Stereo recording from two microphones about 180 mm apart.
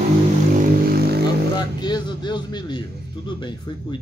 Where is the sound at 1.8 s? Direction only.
25° left (ahead or behind).